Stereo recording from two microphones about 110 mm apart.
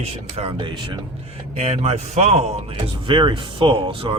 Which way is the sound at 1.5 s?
75° right (ahead or behind).